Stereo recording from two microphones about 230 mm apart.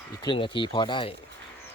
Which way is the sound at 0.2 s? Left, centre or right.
Left.